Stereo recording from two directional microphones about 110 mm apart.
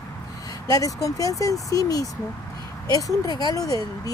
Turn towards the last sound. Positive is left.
turn(degrees=35)  # may be behind; listen again after turning